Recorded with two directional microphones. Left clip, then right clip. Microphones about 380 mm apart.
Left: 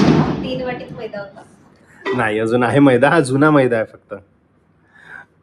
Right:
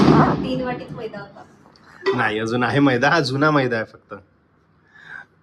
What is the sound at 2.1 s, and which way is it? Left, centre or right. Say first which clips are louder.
Speech: left 7 dB; centre.